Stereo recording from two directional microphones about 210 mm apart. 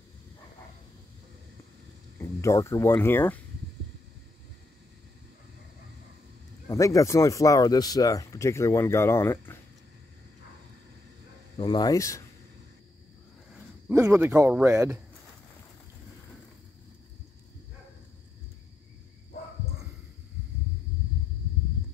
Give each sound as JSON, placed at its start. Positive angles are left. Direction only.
{"t": 2.1, "sound": "speech", "side_deg": 15}
{"t": 6.7, "sound": "speech", "side_deg": 15}
{"t": 11.5, "sound": "speech", "side_deg": 20}
{"t": 13.8, "sound": "speech", "side_deg": -15}